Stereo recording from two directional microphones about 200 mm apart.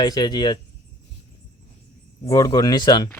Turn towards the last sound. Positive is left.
turn(degrees=20)  # may be behind; listen again after turning